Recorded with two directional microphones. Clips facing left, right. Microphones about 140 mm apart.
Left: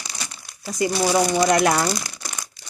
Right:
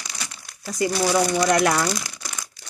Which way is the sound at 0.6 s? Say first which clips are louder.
Left 1 dB; 20° left (ahead or behind).